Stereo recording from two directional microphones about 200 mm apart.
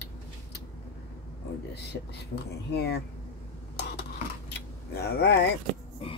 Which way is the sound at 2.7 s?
55° left (ahead or behind).